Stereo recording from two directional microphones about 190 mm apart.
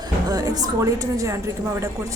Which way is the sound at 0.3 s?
20° right (ahead or behind).